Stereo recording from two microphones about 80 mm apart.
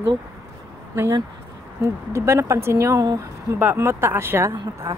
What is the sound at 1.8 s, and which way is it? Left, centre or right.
Speech, right.